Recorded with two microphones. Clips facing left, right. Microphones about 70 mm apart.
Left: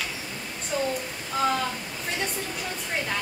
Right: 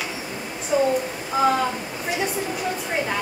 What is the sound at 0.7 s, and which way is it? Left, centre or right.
A woman's voice, centre.